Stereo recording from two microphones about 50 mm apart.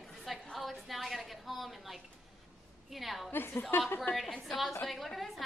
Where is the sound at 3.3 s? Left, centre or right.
Left.